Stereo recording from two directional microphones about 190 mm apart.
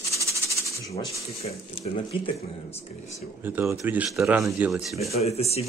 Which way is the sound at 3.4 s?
10° right (ahead or behind).